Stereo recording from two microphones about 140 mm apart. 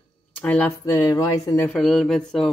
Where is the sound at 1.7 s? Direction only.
5° left (ahead or behind).